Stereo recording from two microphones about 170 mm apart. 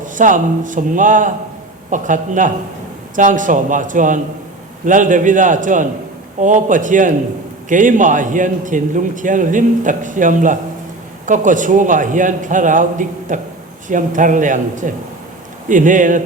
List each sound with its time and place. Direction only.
0.0 s a man's voice: 50° right (ahead or behind)